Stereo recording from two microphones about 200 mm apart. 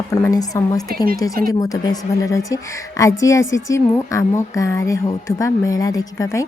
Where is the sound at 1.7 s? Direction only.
20° left (ahead or behind).